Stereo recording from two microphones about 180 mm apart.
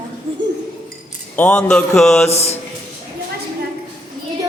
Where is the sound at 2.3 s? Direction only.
35° left (ahead or behind).